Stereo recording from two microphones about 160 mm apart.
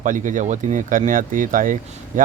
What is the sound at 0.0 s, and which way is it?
Speech, 55° right (ahead or behind).